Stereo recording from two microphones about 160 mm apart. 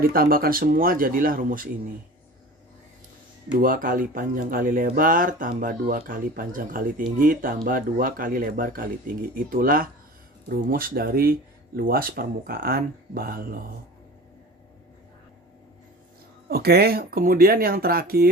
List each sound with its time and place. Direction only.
0.0 s speech: 65° right (ahead or behind)
3.6 s speech: 60° right (ahead or behind)
16.5 s speech: 75° right (ahead or behind)